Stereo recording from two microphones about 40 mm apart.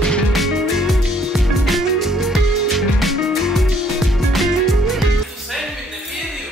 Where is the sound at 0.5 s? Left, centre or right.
Centre.